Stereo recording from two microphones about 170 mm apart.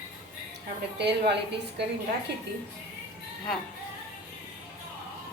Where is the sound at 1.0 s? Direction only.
85° right.